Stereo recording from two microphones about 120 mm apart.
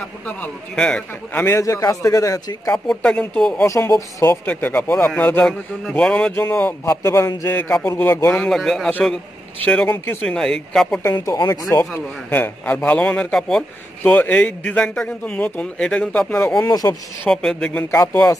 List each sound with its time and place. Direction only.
0.4 s a man's voice: 5° left (ahead or behind); by 2.7 s 25° left (ahead or behind)
2.7 s a man's voice: 5° left (ahead or behind)
3.6 s a man's voice: 25° left (ahead or behind)
4.5 s a man's voice: 15° left (ahead or behind)
6.9 s a man's voice: 25° left (ahead or behind)
8.5 s speech: centre (ahead or behind)
10.2 s speech: 5° left (ahead or behind)
11.1 s speech: 35° left (ahead or behind)
12.3 s a man's voice: 15° left (ahead or behind); by 16.9 s 30° left (ahead or behind)
17.3 s a man's voice: 5° left (ahead or behind)